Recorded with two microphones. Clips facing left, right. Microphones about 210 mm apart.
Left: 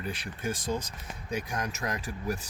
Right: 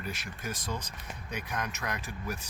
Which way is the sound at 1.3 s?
30° left (ahead or behind).